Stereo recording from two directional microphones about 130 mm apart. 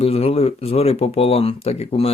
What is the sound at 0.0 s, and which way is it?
Speech, 50° left (ahead or behind).